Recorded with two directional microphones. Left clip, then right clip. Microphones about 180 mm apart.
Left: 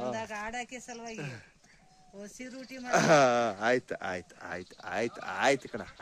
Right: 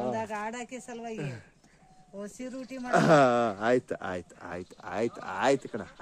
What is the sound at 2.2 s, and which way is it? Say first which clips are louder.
Speech: right 5 dB; 60° right (ahead or behind).